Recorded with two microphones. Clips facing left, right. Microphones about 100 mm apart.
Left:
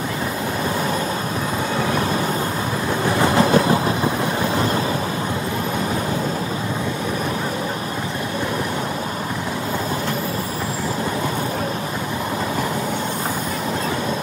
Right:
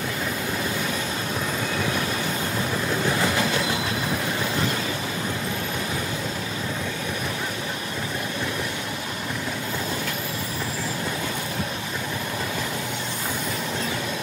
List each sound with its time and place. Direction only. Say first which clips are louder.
3.2 s train: left 8 dB; 40° left (ahead or behind)